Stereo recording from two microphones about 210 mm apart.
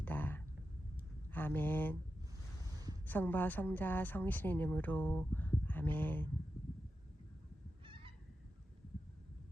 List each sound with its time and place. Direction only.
0.0 s a sound: 10° left (ahead or behind)
1.3 s speech: 10° left (ahead or behind)
3.1 s speech: 10° left (ahead or behind)
7.9 s goose: 25° right (ahead or behind)